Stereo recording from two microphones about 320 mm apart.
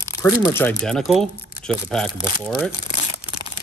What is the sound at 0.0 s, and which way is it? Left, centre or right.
Speech, centre.